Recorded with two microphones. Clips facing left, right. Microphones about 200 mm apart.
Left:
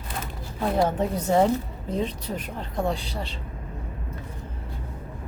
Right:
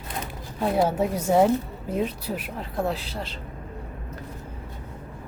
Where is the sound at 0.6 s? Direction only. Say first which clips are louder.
Right 1 dB; 5° right (ahead or behind).